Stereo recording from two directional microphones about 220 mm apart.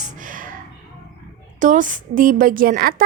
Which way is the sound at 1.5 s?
35° right (ahead or behind).